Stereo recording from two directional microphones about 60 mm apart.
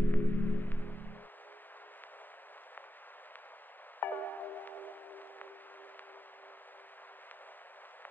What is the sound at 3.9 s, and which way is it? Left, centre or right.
Music, left.